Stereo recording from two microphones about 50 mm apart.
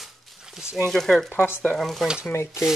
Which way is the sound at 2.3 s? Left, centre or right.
Left.